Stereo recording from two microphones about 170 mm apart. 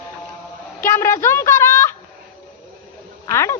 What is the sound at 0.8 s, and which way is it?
A woman's voice, 15° left (ahead or behind).